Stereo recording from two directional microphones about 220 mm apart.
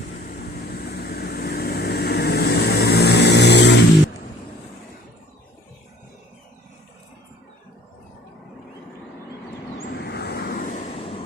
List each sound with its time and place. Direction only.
0.3 s vehicle: 45° left (ahead or behind)
10.0 s vehicle: 45° left (ahead or behind)
10.7 s vehicle: 25° left (ahead or behind)